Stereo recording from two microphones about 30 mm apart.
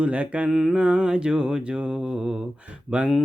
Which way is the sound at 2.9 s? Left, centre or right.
Right.